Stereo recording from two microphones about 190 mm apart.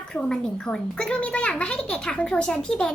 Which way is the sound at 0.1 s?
5° left (ahead or behind).